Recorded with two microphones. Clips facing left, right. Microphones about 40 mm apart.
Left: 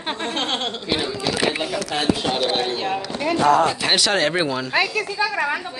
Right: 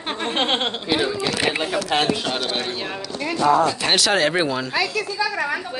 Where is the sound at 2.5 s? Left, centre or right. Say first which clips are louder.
Left 3 dB; centre.